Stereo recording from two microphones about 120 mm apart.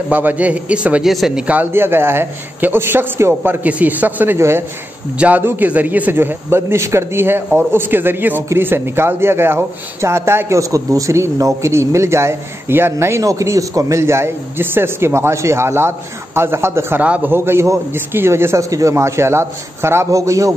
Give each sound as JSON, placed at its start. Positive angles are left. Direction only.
{"t": 0.1, "sound": "a man's voice", "side_deg": -15}